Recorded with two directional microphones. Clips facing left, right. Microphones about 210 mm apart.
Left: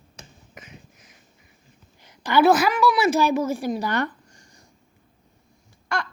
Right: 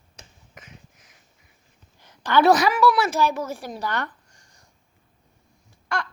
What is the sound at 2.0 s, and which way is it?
A woman's voice, 10° left (ahead or behind).